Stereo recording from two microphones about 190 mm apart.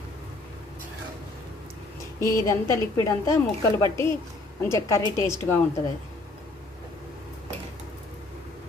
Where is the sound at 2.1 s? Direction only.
15° left (ahead or behind).